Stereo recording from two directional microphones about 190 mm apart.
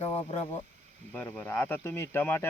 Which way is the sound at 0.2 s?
30° left (ahead or behind).